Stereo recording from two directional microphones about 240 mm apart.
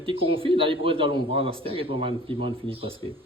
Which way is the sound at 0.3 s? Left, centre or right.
Right.